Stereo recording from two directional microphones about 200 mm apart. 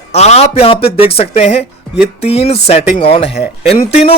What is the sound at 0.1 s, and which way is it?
A man's voice, 35° left (ahead or behind).